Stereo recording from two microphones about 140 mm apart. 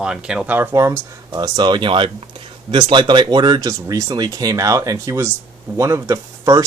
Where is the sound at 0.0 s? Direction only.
5° right (ahead or behind).